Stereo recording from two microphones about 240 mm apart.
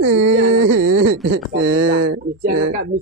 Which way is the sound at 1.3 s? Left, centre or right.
Right.